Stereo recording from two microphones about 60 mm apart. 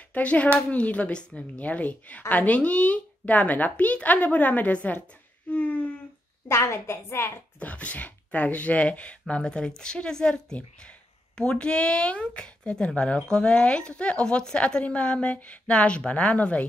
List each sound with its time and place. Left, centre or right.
0.1 s speech: left
6.5 s a woman's voice: left
7.6 s speech: left